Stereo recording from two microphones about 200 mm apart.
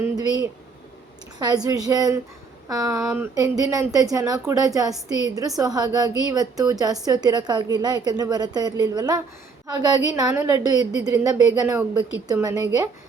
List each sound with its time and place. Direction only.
0.2 s speech: 20° right (ahead or behind)
1.5 s a woman's voice: 20° right (ahead or behind)